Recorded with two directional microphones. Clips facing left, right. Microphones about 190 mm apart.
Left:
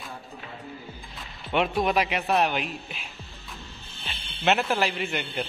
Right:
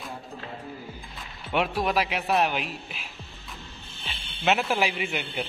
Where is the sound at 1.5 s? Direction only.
5° right (ahead or behind).